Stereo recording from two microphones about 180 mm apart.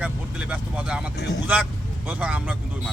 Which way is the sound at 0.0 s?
5° right (ahead or behind).